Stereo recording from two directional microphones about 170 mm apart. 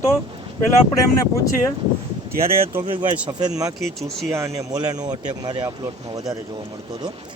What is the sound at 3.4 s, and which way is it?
Speech, 20° right (ahead or behind).